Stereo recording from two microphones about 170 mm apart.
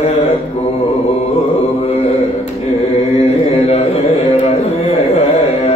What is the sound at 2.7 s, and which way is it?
Chant, 35° left (ahead or behind).